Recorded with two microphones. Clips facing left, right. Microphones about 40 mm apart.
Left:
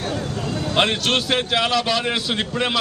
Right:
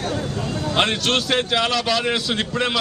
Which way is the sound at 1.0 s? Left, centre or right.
Centre.